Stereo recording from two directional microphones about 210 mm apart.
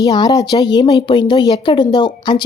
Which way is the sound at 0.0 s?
20° left (ahead or behind).